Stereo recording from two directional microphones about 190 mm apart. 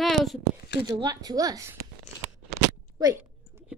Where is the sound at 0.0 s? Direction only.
Centre (ahead or behind).